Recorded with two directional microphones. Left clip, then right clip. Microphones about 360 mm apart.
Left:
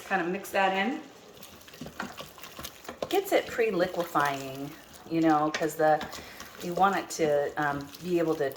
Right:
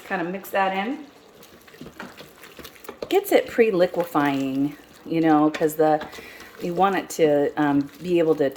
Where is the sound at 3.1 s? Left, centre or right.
Right.